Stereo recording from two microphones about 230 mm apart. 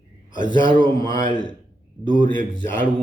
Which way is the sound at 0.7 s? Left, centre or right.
Centre.